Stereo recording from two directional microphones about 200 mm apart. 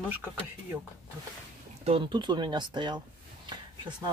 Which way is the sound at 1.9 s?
25° right (ahead or behind).